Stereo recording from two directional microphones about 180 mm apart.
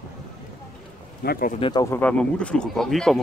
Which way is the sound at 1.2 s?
55° left (ahead or behind).